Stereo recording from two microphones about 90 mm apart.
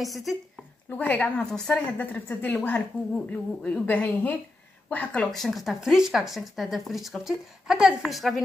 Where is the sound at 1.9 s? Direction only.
20° left (ahead or behind).